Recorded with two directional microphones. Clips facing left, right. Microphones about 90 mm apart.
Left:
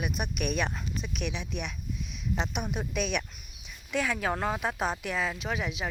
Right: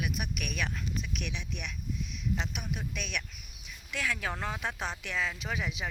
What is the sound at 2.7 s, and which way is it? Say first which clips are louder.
Speech: left 8 dB; 45° left (ahead or behind).